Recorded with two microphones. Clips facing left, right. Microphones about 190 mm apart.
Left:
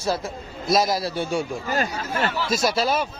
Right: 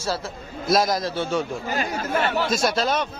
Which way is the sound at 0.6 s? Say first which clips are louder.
Even; centre (ahead or behind).